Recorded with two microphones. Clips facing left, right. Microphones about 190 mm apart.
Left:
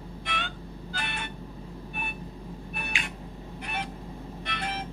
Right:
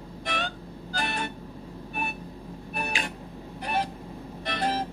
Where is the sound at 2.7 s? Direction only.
35° right (ahead or behind).